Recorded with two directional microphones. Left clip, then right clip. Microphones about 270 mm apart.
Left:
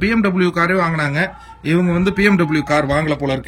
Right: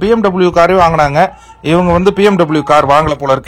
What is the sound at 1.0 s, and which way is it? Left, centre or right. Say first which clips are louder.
Speech: right 10 dB; centre.